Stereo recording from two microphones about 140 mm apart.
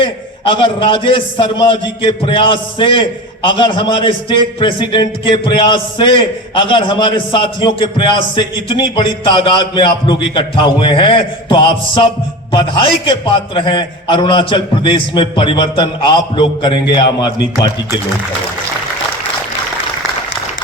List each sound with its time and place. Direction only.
0.0 s a man's voice: 35° left (ahead or behind)